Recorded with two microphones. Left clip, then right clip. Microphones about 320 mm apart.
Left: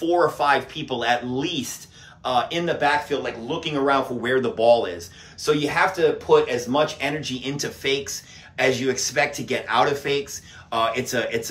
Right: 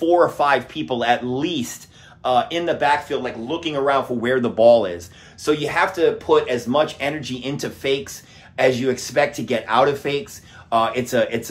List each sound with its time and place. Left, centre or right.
0.0 s speech: centre